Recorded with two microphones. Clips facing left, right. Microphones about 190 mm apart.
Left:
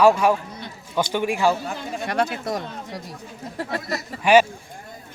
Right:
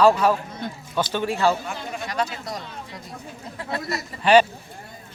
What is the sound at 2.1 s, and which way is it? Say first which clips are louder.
Speech: left 5 dB; 55° left (ahead or behind).